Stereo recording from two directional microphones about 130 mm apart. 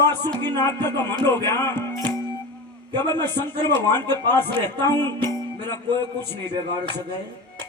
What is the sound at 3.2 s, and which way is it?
Music, 20° left (ahead or behind).